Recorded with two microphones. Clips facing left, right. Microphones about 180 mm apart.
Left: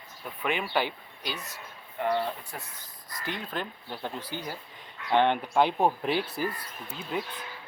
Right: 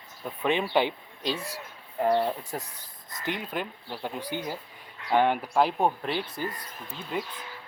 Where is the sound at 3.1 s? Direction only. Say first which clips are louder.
Right 2 dB; 20° right (ahead or behind); by 7.3 s centre (ahead or behind).